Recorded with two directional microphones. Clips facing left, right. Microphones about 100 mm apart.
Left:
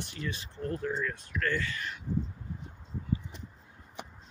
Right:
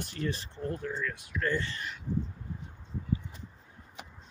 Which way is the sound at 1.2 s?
15° right (ahead or behind).